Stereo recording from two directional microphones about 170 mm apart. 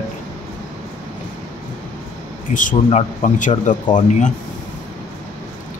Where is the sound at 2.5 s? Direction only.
50° left (ahead or behind).